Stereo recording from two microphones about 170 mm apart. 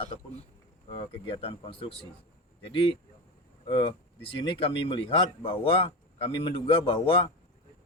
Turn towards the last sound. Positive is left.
turn(degrees=30)  # may be behind; listen again after turning